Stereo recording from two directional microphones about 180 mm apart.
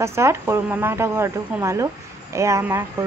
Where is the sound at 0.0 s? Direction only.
15° right (ahead or behind).